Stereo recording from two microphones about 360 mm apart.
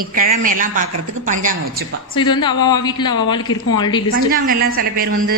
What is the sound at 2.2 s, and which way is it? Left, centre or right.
A woman's voice, centre.